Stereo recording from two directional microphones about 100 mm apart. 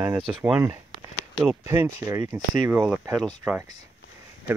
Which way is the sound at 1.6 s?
25° right (ahead or behind).